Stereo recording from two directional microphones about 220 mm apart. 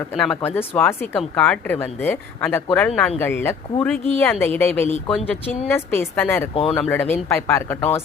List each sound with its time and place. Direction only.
0.2 s speech: 5° left (ahead or behind)
6.5 s speech: 25° left (ahead or behind)
6.7 s speech: 5° left (ahead or behind)